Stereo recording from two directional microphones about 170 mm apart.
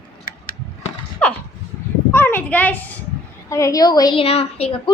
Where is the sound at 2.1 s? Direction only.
15° left (ahead or behind).